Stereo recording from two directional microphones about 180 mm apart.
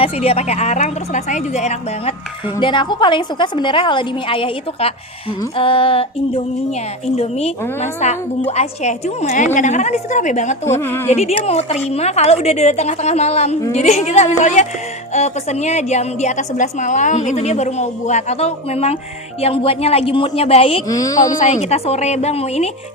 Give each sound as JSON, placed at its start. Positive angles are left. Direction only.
{"t": 0.0, "sound": "a woman's voice", "side_deg": 35}
{"t": 2.6, "sound": "a woman's voice", "side_deg": 25}
{"t": 10.8, "sound": "a woman's voice", "side_deg": 15}
{"t": 11.1, "sound": "a woman's voice", "side_deg": 35}
{"t": 20.8, "sound": "a woman's voice", "side_deg": 20}
{"t": 21.3, "sound": "a woman's voice", "side_deg": 40}